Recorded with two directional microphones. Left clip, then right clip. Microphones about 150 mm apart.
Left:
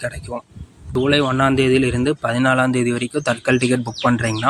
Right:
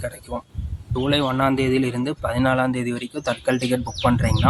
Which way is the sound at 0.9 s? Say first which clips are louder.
Left 4 dB; 20° left (ahead or behind).